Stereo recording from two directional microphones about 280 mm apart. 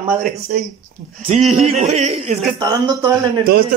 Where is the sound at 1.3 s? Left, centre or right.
Right.